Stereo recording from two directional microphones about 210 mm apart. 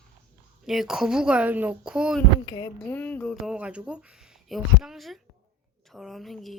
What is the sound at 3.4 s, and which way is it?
Speech, 5° right (ahead or behind).